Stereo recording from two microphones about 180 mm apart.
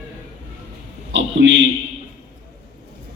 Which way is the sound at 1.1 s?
80° right.